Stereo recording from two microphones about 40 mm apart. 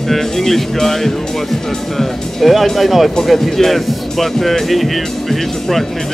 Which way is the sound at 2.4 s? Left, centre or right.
Centre.